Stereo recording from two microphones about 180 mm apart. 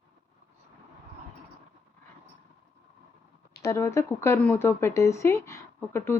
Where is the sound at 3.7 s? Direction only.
15° left (ahead or behind).